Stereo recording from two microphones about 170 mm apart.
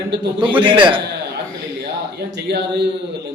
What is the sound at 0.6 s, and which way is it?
Speech, 30° right (ahead or behind).